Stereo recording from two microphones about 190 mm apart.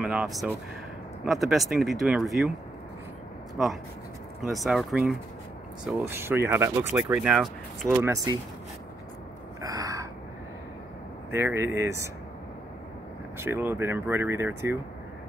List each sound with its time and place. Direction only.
0.0 s speech: 5° right (ahead or behind)
4.4 s speech: centre (ahead or behind)
7.9 s speech: 15° right (ahead or behind)
9.6 s crow: 20° right (ahead or behind)
11.3 s speech: 15° right (ahead or behind)
13.4 s speech: 10° right (ahead or behind)